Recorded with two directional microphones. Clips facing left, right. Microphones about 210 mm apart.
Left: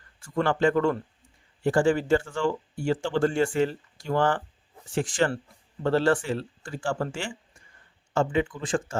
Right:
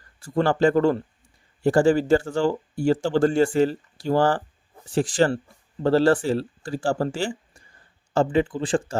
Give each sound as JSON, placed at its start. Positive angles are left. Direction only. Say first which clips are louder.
{"t": 0.2, "sound": "speech", "louder": "right 4 dB", "side_deg": -35}